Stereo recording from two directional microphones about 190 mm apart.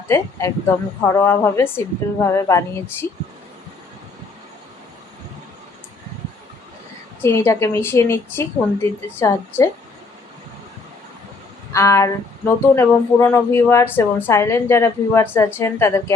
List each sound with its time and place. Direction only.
0.1 s a woman's voice: 15° left (ahead or behind)
7.2 s a woman's voice: 10° left (ahead or behind)
11.7 s a woman's voice: 15° left (ahead or behind)